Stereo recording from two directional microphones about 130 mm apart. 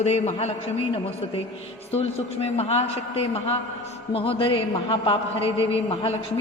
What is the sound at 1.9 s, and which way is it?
A man's voice, 50° left (ahead or behind).